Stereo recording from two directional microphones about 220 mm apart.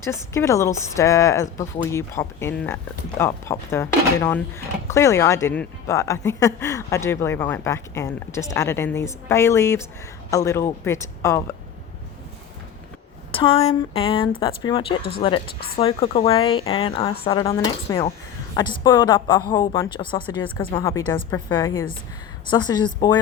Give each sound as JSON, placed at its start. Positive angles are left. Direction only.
{"t": 0.0, "sound": "a woman's voice", "side_deg": 10}
{"t": 13.3, "sound": "a woman's voice", "side_deg": 25}